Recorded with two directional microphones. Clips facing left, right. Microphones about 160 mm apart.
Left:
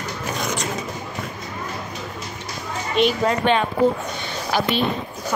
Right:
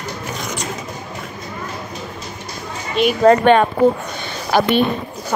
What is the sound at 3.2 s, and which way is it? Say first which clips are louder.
A woman's voice: right 8 dB; 55° right (ahead or behind).